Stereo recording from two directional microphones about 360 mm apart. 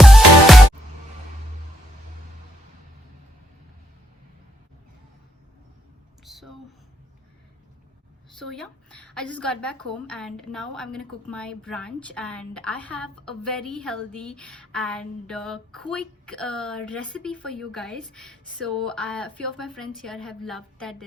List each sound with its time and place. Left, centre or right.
0.0 s music: centre
6.2 s a sound: centre
8.4 s a woman's voice: centre